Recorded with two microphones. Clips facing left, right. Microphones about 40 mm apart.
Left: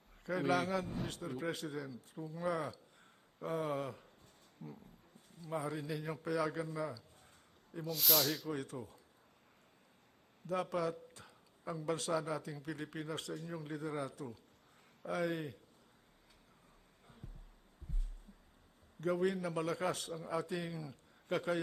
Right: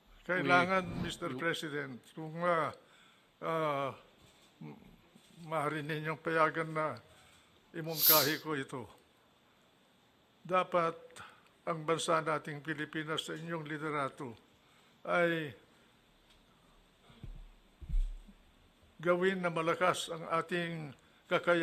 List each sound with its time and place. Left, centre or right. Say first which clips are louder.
0.3 s a man's voice: right 5 dB; right
7.9 s speech: right 3 dB; centre
8.4 s a man's voice: right 3 dB; right
10.4 s a man's voice: right 6 dB; right
17.2 s music: right 1 dB; right
17.9 s a sound: right 2 dB; right
18.9 s a man's voice: right 4 dB; right